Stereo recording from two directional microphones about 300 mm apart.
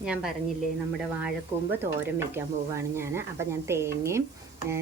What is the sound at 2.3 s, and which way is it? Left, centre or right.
Speech, centre.